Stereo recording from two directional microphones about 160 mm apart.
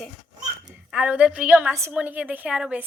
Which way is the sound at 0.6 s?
5° right (ahead or behind).